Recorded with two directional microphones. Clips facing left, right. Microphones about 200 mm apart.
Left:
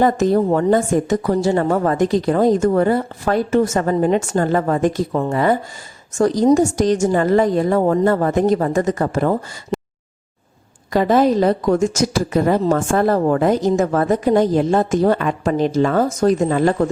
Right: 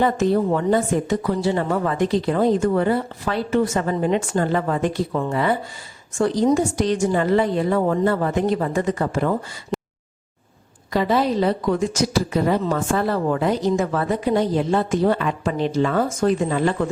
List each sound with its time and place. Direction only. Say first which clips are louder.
0.0 s a woman's voice: left 3 dB; 45° left (ahead or behind)
9.7 s a sound: left 3 dB; centre (ahead or behind)
10.9 s a woman's voice: left 5 dB; 45° left (ahead or behind)